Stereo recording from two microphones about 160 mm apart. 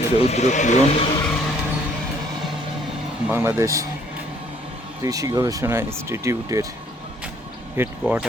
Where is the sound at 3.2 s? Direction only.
10° right (ahead or behind).